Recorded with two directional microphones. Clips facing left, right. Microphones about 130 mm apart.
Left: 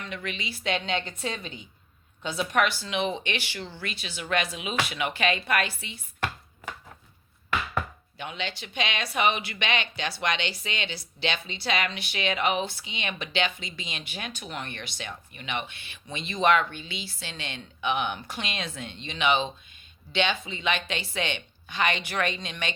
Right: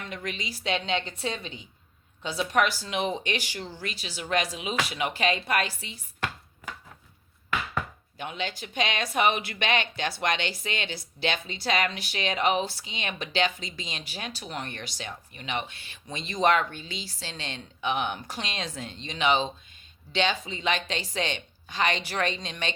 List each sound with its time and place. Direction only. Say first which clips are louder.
0.1 s speech: even; 40° right (ahead or behind)
8.2 s speech: right 1 dB; 45° right (ahead or behind)